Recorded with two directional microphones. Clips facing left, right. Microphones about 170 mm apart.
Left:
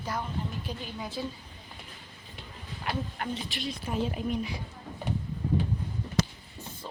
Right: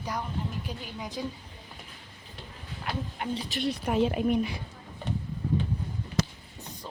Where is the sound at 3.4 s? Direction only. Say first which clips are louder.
Right 4 dB; 40° right (ahead or behind).